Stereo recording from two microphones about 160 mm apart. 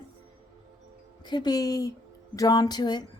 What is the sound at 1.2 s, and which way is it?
Speech, 25° left (ahead or behind).